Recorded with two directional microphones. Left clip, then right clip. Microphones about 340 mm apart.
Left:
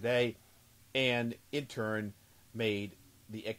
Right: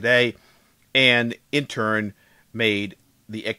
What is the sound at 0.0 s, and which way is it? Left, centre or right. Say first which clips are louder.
Speech: right 13 dB; right.